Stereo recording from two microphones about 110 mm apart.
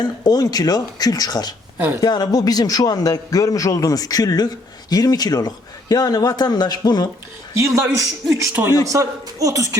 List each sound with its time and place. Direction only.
0.0 s a man's voice: 35° left (ahead or behind)
7.6 s a woman's voice: 25° right (ahead or behind)